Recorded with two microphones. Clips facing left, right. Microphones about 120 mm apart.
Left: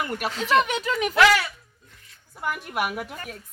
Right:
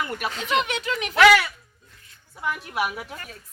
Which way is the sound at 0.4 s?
40° left (ahead or behind).